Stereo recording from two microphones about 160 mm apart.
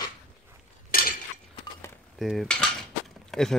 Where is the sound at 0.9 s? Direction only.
65° left (ahead or behind).